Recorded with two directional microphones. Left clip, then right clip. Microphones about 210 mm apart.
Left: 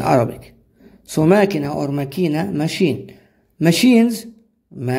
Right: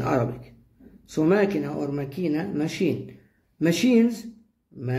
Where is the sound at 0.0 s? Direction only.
50° left (ahead or behind).